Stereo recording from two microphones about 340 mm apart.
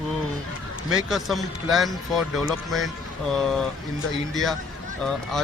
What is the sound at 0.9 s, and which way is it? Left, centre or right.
Speech, centre.